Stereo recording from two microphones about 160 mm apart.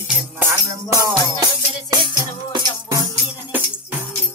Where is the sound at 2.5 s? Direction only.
25° right (ahead or behind).